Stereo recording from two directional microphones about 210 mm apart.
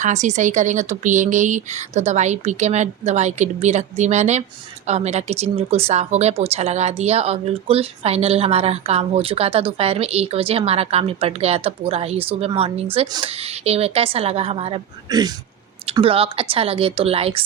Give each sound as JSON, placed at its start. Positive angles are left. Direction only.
{"t": 0.0, "sound": "speech", "side_deg": -35}